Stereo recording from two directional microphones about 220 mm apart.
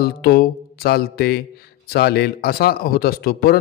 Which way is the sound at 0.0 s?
45° left (ahead or behind).